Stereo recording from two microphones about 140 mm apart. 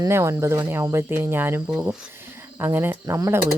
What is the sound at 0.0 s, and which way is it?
Speech, 20° right (ahead or behind).